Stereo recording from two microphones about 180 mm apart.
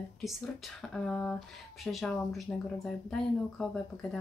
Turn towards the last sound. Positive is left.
turn(degrees=5)  # may be behind; listen again after turning